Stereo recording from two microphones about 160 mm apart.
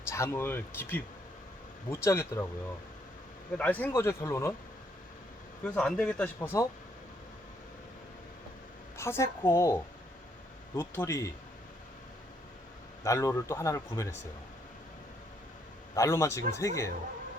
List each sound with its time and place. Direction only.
0.1 s speech: 15° left (ahead or behind)
3.6 s speech: 10° left (ahead or behind)
5.6 s speech: 5° left (ahead or behind)
9.0 s speech: 15° left (ahead or behind)
13.1 s speech: 20° left (ahead or behind)
16.0 s speech: 20° left (ahead or behind)